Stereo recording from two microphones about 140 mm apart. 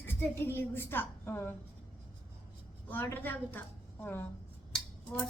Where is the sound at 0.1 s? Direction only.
15° left (ahead or behind).